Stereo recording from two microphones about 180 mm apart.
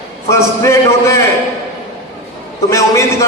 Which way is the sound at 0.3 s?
15° left (ahead or behind).